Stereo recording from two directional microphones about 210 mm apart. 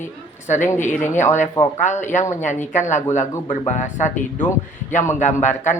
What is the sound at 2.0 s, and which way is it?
Speech, 35° left (ahead or behind).